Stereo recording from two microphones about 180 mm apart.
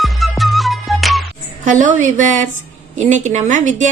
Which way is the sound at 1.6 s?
45° right (ahead or behind).